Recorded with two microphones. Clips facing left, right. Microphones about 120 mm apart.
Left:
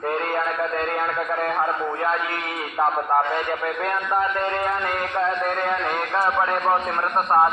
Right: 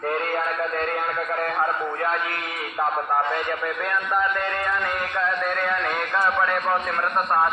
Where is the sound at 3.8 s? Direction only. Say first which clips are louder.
Left 1 dB; 35° left (ahead or behind).